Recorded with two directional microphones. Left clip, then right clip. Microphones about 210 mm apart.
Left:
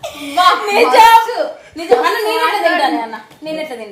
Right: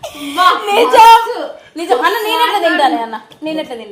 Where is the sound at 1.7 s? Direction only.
35° right (ahead or behind).